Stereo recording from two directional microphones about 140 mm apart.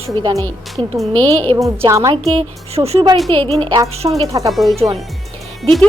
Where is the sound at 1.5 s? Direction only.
40° right (ahead or behind).